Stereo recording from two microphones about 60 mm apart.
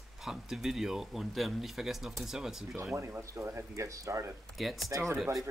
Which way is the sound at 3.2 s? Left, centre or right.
Right.